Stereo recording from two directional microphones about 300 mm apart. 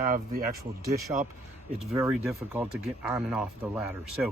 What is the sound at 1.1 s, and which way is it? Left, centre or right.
Speech, centre.